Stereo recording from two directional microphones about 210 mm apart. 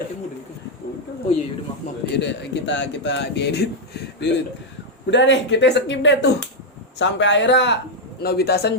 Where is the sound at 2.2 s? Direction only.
55° left (ahead or behind).